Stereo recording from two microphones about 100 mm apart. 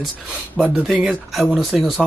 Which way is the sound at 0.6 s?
Centre (ahead or behind).